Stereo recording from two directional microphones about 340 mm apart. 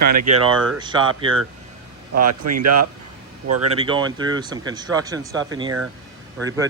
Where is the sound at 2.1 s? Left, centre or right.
Right.